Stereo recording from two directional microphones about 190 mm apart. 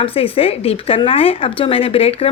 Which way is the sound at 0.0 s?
30° left (ahead or behind).